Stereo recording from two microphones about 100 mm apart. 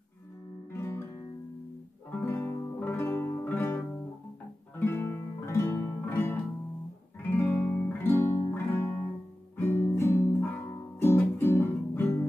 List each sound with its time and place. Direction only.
0.7 s music: 25° left (ahead or behind)
2.2 s music: 20° left (ahead or behind)
11.0 s guitar: 25° left (ahead or behind)